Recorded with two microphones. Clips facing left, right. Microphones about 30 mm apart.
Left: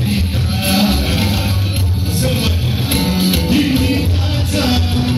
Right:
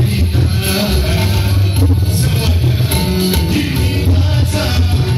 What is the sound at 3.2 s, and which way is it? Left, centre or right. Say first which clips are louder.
Music: left 2 dB; centre.